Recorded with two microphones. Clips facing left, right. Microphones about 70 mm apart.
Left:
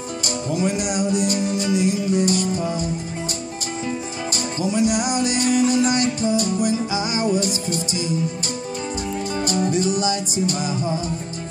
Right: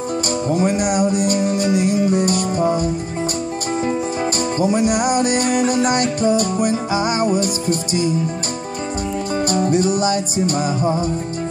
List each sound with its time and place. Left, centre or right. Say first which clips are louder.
0.5 s music: right 4 dB; right
4.6 s music: right 2 dB; right
9.7 s music: right 4 dB; right